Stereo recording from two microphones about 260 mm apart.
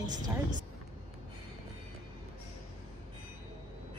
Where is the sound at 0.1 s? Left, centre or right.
Right.